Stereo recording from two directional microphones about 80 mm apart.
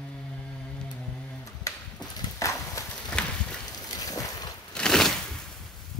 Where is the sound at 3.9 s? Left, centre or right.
Left.